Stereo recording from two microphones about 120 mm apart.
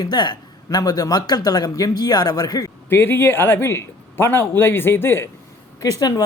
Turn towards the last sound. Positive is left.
turn(degrees=30)  # may be behind; listen again after turning